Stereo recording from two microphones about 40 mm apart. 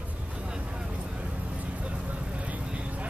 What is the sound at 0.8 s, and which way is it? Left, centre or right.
Vehicle, right.